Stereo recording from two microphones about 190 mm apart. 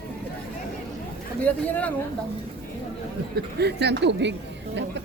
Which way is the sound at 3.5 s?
60° right (ahead or behind).